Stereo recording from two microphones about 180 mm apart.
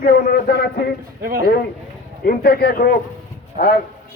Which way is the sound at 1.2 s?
55° right (ahead or behind).